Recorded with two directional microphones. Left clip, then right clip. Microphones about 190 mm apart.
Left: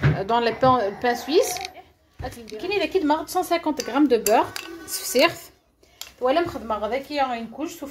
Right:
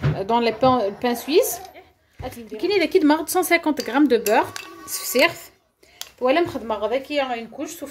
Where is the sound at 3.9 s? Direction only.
20° right (ahead or behind).